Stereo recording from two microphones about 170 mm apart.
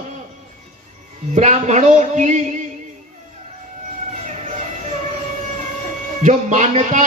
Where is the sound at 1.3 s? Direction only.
45° right (ahead or behind).